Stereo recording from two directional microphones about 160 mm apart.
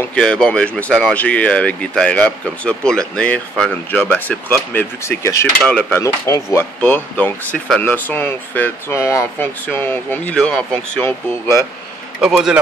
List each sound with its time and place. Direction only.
0.0 s speech: 5° left (ahead or behind)
5.6 s speech: 5° left (ahead or behind)
5.9 s speech: 20° left (ahead or behind)
12.2 s speech: 5° right (ahead or behind)